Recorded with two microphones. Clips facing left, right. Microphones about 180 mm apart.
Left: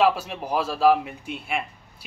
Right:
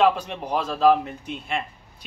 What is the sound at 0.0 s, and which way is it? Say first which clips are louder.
Speech: right 1 dB; 5° left (ahead or behind).